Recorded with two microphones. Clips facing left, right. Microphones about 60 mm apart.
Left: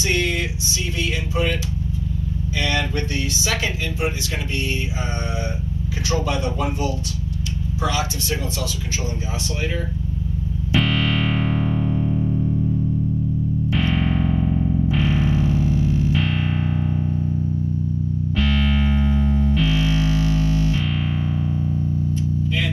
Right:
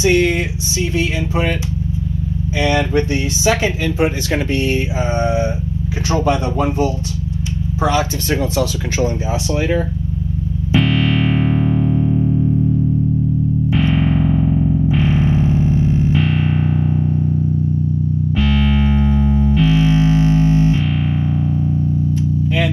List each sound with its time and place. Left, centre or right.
0.0 s speech: right
2.6 s speech: right
5.2 s speech: right
8.3 s speech: right
10.8 s music: centre
13.7 s music: right
13.9 s music: centre
15.0 s music: right
16.2 s music: centre
18.3 s music: centre
19.6 s music: right
20.9 s music: centre